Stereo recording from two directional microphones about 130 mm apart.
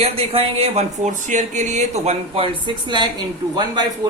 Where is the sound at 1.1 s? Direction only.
70° right (ahead or behind).